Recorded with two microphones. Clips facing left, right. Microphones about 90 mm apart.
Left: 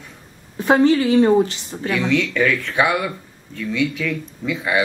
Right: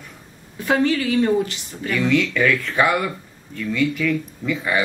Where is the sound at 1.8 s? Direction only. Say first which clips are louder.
Left 1 dB; 15° left (ahead or behind).